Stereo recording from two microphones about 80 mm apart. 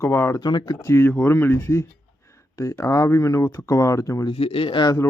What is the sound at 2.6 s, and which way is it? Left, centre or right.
A man's voice, left.